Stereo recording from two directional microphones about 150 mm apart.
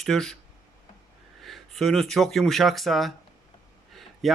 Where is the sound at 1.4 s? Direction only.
Centre (ahead or behind).